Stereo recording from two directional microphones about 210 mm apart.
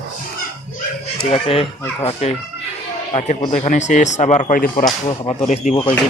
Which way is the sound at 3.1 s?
30° left (ahead or behind).